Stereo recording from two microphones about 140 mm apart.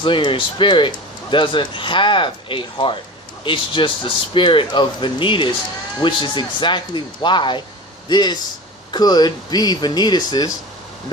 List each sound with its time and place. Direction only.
0.0 s speech: 35° left (ahead or behind)